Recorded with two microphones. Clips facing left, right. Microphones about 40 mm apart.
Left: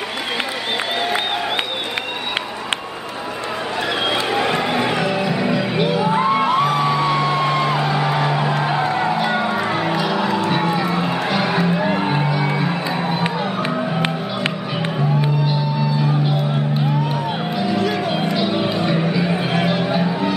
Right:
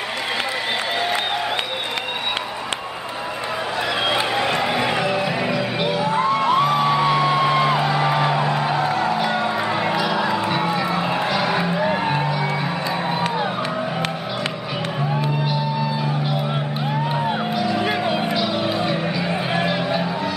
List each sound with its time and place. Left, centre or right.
4.1 s a sound: centre
5.1 s music: centre
6.0 s music: centre
6.5 s music: centre
8.5 s music: centre
10.5 s a sound: centre
11.5 s music: centre
18.3 s music: centre